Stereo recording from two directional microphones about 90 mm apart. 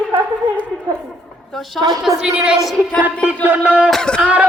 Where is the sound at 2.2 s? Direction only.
10° right (ahead or behind).